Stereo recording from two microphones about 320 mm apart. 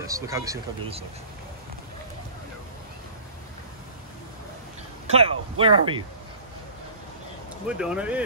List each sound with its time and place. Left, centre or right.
0.0 s speech: centre
5.0 s speech: centre
7.6 s speech: centre